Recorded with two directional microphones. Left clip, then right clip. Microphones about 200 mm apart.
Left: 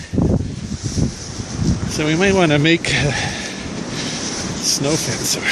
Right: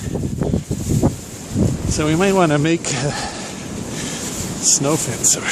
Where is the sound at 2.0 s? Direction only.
5° right (ahead or behind).